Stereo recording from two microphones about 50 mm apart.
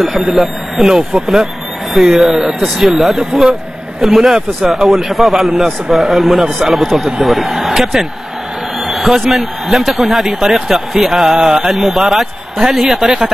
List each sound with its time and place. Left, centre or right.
0.0 s a man's voice: centre
3.2 s a man's voice: centre